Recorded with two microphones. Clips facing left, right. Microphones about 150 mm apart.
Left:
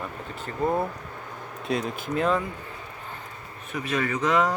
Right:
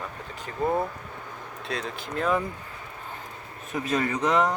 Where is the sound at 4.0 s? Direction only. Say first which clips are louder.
Left 2 dB; 30° right (ahead or behind).